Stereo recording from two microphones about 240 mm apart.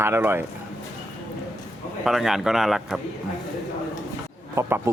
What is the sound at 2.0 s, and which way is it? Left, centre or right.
Speech, centre.